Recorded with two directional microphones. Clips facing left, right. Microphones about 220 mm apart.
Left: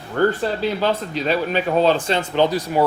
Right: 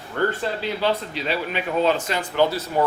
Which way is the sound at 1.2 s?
35° left (ahead or behind).